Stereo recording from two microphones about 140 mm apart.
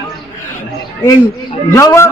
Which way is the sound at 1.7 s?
20° left (ahead or behind).